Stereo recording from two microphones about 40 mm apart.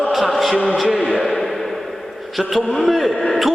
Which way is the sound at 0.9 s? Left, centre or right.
Centre.